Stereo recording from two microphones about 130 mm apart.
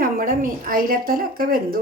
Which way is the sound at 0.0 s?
90° right.